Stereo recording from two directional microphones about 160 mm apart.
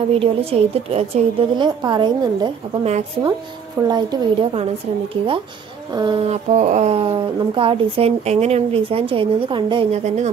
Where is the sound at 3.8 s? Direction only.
25° right (ahead or behind).